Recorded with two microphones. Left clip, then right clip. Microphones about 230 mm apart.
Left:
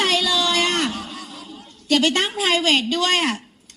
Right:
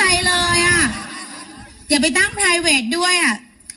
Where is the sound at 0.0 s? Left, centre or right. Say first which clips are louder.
Right 2 dB; right.